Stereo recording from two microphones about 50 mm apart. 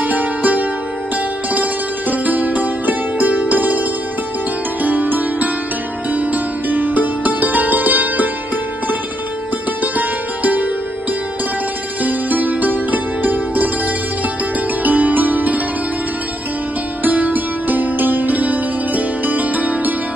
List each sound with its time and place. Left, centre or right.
0.0 s music: right
4.8 s music: right
9.9 s music: right
12.0 s music: right
14.8 s music: right
17.0 s music: right